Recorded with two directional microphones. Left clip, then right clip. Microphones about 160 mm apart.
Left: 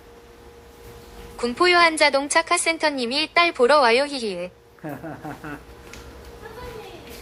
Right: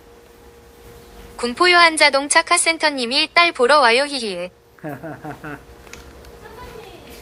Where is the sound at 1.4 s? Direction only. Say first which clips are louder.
Right 4 dB; centre (ahead or behind).